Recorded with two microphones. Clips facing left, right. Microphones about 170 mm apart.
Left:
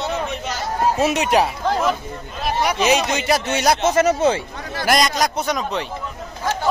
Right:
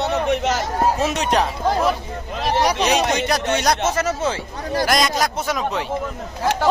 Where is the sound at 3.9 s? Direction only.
20° left (ahead or behind).